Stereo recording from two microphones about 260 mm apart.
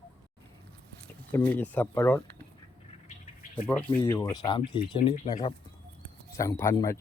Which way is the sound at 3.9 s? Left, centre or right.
Centre.